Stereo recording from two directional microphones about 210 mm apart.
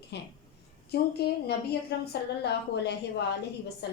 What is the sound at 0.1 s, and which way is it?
A woman's voice, 55° left (ahead or behind).